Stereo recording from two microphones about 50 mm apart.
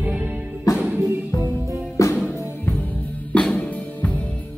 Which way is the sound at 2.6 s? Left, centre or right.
Left.